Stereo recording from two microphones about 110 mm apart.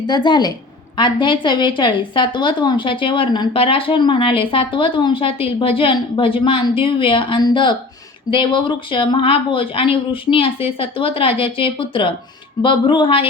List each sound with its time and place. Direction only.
0.1 s a woman's voice: 40° left (ahead or behind)